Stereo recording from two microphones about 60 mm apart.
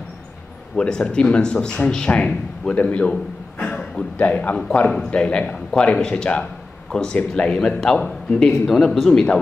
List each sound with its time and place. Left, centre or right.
0.7 s a man's voice: centre